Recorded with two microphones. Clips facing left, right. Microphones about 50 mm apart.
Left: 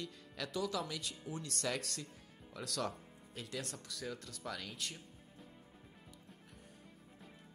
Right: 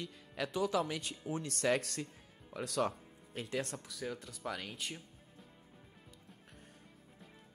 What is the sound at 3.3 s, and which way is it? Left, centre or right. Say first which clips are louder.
Speech: right 6 dB; right.